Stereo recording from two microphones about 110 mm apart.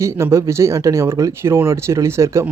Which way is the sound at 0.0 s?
25° right (ahead or behind).